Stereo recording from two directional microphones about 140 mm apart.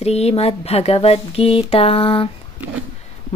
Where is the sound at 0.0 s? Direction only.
50° left (ahead or behind).